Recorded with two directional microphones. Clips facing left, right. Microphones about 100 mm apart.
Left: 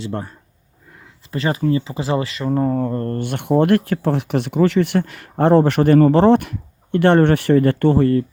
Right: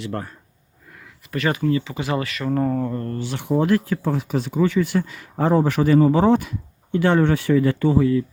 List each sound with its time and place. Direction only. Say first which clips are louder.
0.0 s speech: left 2 dB; 25° left (ahead or behind); by 8.2 s 60° left (ahead or behind)